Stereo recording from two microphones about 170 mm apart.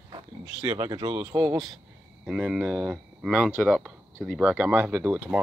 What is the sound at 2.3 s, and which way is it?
Speech, 5° right (ahead or behind).